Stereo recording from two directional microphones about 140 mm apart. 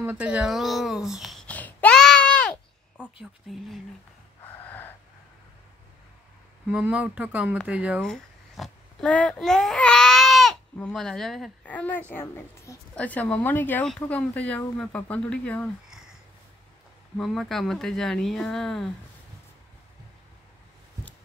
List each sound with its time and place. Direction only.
0.0 s speech: 10° right (ahead or behind)
1.5 s a sound: 10° left (ahead or behind)
3.2 s speech: centre (ahead or behind)
4.6 s gasp: 15° left (ahead or behind)
6.7 s speech: 10° right (ahead or behind)
8.0 s a sound: centre (ahead or behind)
9.1 s speech: 5° left (ahead or behind)
17.2 s speech: centre (ahead or behind)